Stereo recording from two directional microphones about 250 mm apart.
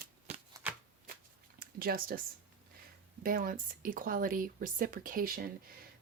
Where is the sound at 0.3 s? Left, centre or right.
Right.